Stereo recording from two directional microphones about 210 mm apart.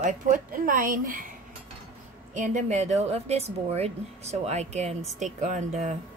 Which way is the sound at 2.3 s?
35° right (ahead or behind).